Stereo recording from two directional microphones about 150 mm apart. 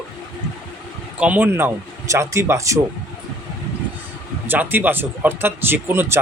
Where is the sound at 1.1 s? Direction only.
10° right (ahead or behind).